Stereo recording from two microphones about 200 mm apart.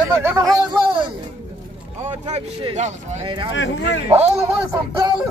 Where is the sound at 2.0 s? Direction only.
30° right (ahead or behind).